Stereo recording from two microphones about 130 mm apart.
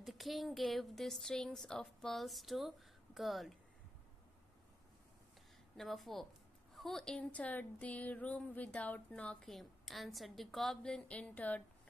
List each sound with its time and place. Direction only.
0.0 s a woman's voice: centre (ahead or behind)
5.8 s a woman's voice: centre (ahead or behind)